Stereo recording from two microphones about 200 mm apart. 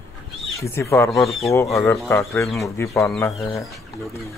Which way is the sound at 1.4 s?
15° left (ahead or behind).